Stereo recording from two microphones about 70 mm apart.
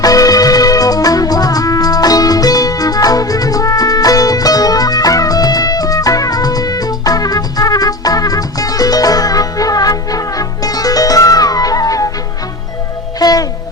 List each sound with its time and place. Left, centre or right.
0.0 s music: left
13.1 s music: left